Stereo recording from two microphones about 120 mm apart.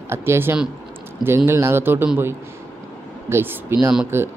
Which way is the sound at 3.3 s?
20° right (ahead or behind).